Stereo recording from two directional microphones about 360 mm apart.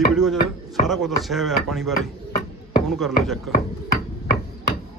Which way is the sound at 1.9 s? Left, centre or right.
Left.